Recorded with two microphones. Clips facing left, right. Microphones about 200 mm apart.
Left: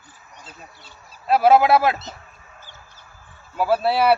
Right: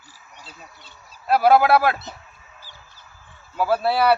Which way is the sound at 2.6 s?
50° left (ahead or behind).